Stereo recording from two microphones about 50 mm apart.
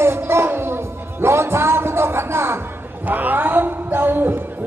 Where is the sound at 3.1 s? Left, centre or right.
Right.